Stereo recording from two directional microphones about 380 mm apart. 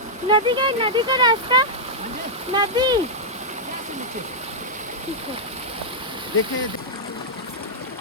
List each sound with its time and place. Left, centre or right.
0.3 s speech: centre